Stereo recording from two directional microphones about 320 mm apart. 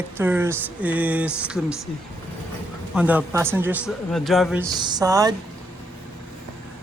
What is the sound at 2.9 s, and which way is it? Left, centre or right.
A man's voice, centre.